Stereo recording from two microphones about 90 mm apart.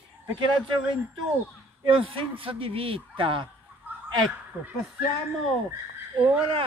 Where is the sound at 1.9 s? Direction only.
80° right.